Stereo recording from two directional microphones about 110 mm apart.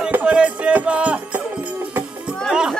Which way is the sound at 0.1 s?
10° right (ahead or behind).